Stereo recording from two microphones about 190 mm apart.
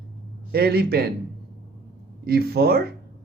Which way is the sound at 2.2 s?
55° right (ahead or behind).